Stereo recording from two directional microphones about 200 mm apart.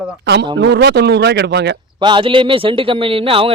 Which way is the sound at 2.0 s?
25° right (ahead or behind).